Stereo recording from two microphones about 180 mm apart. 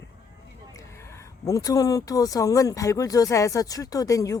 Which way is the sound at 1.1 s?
20° left (ahead or behind).